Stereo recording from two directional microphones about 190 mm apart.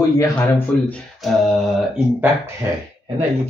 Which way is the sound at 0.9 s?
Centre (ahead or behind).